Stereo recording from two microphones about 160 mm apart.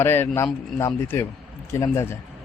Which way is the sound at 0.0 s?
15° left (ahead or behind).